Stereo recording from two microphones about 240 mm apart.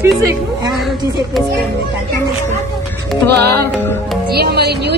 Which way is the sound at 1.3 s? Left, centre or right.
Centre.